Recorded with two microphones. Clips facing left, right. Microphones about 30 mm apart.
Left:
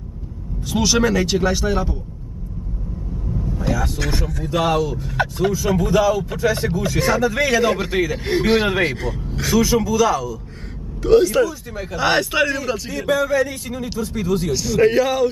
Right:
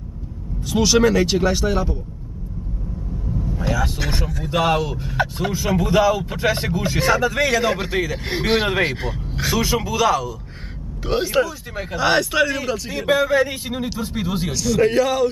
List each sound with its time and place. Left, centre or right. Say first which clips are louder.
0.7 s speech: right 2 dB; centre
3.5 s vehicle: left 1 dB; centre
4.0 s speech: left 1 dB; centre
4.8 s speech: left 2 dB; right
5.1 s speech: left 2 dB; centre
5.8 s speech: right 1 dB; centre
6.3 s speech: left 1 dB; right
7.0 s speech: even; centre
12.0 s speech: even; centre
13.3 s speech: right 1 dB; right
14.5 s speech: left 1 dB; centre